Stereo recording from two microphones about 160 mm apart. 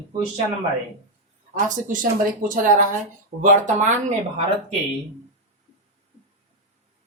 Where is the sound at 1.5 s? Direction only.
55° right (ahead or behind).